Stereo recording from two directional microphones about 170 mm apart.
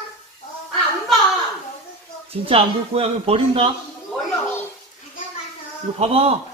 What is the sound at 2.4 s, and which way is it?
A man's voice, 35° right (ahead or behind).